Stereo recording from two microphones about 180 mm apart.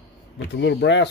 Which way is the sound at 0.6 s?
75° left (ahead or behind).